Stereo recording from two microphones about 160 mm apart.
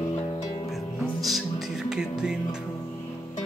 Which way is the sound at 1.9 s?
5° right (ahead or behind).